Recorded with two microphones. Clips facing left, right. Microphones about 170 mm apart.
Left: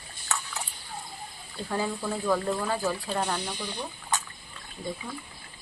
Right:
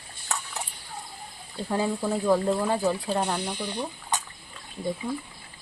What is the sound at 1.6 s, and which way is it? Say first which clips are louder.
Speech: right 4 dB; 15° right (ahead or behind).